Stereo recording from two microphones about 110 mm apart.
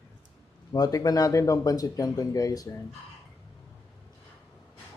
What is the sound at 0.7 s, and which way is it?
Speech, 35° left (ahead or behind).